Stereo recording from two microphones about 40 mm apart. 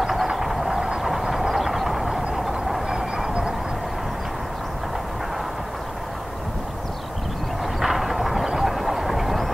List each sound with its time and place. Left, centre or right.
0.0 s vehicle: centre
2.9 s vehicle: centre
7.8 s a sound: centre
8.5 s vehicle: centre